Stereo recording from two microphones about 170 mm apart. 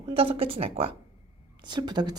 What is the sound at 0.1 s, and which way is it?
Speech, 30° right (ahead or behind).